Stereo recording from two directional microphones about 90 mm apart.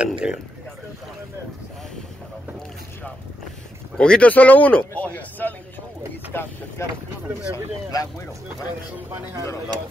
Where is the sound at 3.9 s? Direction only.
10° left (ahead or behind).